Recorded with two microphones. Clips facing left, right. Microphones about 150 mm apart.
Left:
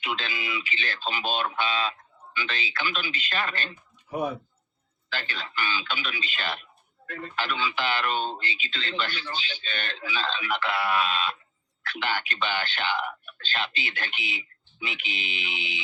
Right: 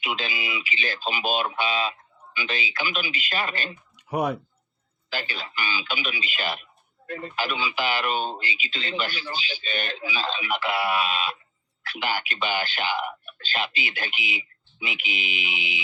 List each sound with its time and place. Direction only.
0.0 s speech: 10° right (ahead or behind)
3.9 s a sound: 80° right
5.1 s speech: 10° right (ahead or behind)